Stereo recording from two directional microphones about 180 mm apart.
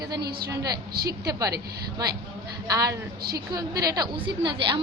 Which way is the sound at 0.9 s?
60° right (ahead or behind).